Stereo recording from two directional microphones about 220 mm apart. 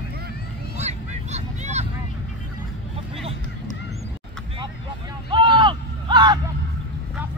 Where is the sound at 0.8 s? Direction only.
30° right (ahead or behind).